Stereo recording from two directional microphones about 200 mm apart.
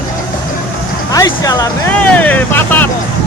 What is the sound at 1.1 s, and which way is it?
Vehicle, 15° left (ahead or behind).